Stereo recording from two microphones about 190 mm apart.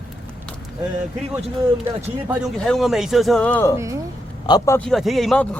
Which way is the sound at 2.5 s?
5° left (ahead or behind).